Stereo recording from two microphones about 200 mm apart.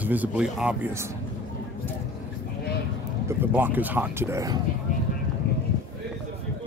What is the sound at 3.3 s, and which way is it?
Speech, 10° right (ahead or behind).